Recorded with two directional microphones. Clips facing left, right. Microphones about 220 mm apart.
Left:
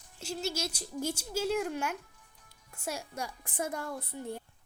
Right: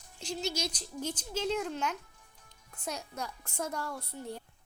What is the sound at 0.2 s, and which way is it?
A child's voice, 5° left (ahead or behind).